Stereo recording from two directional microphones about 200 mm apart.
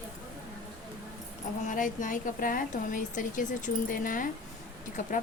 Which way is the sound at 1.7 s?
40° left (ahead or behind).